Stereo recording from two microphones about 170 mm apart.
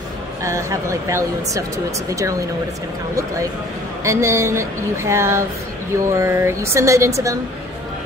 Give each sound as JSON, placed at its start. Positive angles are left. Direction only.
{"t": 0.4, "sound": "a woman's voice", "side_deg": -15}
{"t": 4.0, "sound": "a woman's voice", "side_deg": -15}